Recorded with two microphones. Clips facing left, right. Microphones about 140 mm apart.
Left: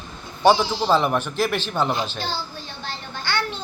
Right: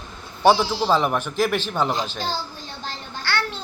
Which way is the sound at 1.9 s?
40° right (ahead or behind).